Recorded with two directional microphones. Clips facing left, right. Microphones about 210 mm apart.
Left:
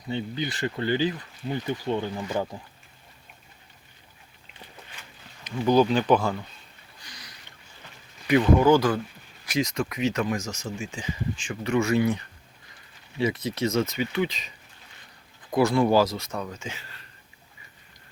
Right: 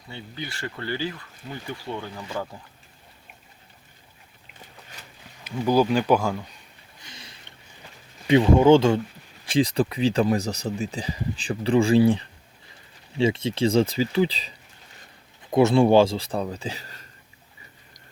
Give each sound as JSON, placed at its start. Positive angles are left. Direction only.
{"t": 0.1, "sound": "speech", "side_deg": 20}
{"t": 5.4, "sound": "speech", "side_deg": -10}
{"t": 7.0, "sound": "sniff", "side_deg": -25}
{"t": 8.3, "sound": "speech", "side_deg": -25}